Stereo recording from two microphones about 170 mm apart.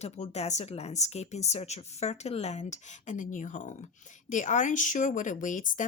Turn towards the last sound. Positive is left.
turn(degrees=50)  # may be behind; listen again after turning